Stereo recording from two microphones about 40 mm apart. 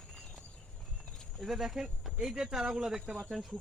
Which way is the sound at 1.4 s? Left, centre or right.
Centre.